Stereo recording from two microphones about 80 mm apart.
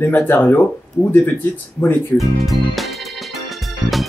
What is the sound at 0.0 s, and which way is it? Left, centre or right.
Speech, left.